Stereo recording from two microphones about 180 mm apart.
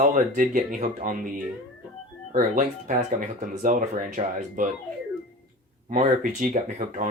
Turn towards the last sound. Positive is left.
turn(degrees=-45)  # may be behind; listen again after turning